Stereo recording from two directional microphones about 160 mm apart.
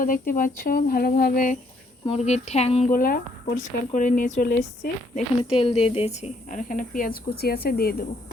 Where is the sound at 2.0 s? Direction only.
40° left (ahead or behind).